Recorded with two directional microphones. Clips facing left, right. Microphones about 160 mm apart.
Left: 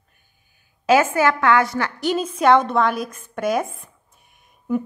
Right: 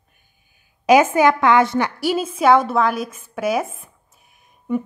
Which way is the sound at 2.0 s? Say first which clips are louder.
Left 1 dB; 5° right (ahead or behind).